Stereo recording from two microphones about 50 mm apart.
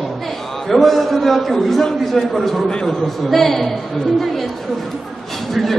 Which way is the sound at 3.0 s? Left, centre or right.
Centre.